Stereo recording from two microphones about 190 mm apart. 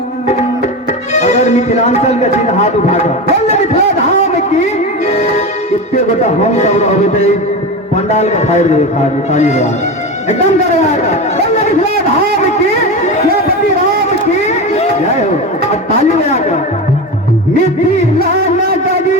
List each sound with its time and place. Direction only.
1.1 s speech: 35° left (ahead or behind)
4.6 s music: 35° left (ahead or behind)
6.2 s speech: 35° left (ahead or behind)
10.8 s speech: 35° left (ahead or behind)
14.4 s speech: 35° left (ahead or behind)